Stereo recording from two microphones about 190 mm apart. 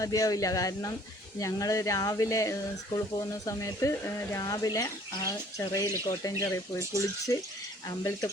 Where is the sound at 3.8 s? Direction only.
15° left (ahead or behind).